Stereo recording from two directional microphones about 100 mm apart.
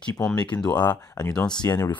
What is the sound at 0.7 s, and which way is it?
Speech, 45° left (ahead or behind).